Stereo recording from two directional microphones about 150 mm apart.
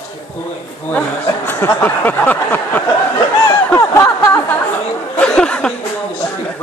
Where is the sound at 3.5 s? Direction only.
20° left (ahead or behind).